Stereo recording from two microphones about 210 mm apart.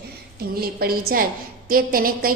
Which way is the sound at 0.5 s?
45° right (ahead or behind).